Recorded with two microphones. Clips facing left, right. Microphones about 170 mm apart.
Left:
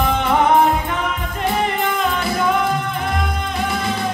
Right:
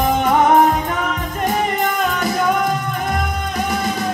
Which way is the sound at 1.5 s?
40° right (ahead or behind).